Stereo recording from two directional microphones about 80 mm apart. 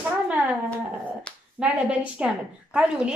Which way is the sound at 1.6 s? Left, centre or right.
Centre.